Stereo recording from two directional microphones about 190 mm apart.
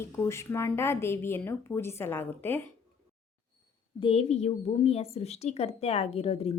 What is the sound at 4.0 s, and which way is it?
A woman's voice, 30° left (ahead or behind).